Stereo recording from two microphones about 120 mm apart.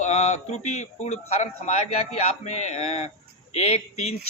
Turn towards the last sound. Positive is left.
turn(degrees=60)  # may be behind; listen again after turning